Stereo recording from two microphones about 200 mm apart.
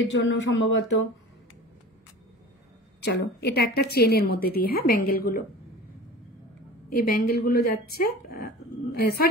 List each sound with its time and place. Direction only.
0.0 s speech: 70° left (ahead or behind)
3.0 s a woman's voice: 60° left (ahead or behind)
6.9 s a woman's voice: 50° left (ahead or behind)